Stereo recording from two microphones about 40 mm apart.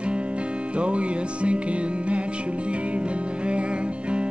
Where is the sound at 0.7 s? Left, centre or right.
Right.